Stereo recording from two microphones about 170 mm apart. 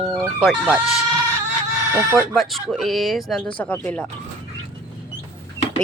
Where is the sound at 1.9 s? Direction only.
15° right (ahead or behind).